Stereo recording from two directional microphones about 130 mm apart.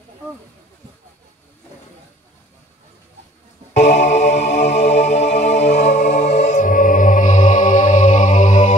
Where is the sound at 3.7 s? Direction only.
60° left (ahead or behind).